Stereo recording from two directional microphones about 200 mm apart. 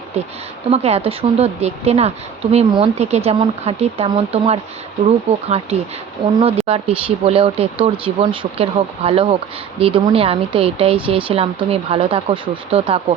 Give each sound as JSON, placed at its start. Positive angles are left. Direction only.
{"t": 0.7, "sound": "a woman's voice", "side_deg": -30}